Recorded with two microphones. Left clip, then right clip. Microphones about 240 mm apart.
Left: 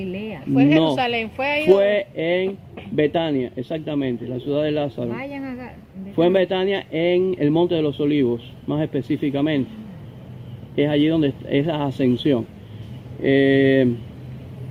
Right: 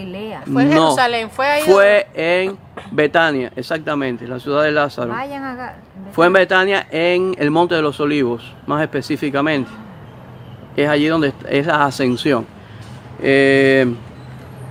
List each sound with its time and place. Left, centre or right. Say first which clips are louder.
0.0 s a sound: right 2 dB; right
1.2 s speech: right 6 dB; right
1.6 s speech: right 5 dB; right
10.8 s speech: right 4 dB; right